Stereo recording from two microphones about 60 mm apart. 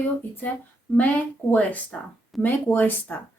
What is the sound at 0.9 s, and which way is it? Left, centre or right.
A woman's voice, left.